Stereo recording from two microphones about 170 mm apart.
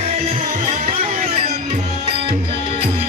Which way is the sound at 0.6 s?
55° right (ahead or behind).